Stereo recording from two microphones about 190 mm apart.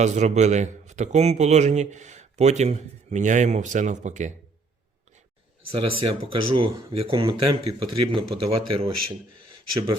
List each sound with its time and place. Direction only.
0.0 s a man's voice: 35° right (ahead or behind)
5.7 s speech: 30° right (ahead or behind)